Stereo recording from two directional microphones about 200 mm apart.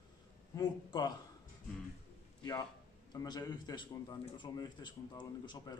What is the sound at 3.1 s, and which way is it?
A man's voice, 20° left (ahead or behind).